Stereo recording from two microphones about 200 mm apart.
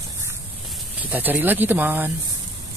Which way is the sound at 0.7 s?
5° right (ahead or behind).